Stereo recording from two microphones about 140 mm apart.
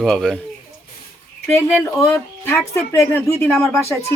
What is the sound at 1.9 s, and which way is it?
Speech, 20° left (ahead or behind).